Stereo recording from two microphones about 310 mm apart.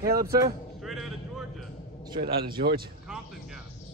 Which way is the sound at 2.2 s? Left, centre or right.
Right.